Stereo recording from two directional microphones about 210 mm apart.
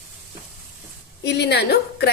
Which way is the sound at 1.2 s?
55° left (ahead or behind).